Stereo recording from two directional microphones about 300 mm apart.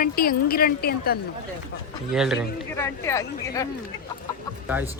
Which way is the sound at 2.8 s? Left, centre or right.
Centre.